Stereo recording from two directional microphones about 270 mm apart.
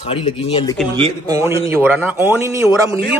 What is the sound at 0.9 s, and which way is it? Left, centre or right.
Speech, centre.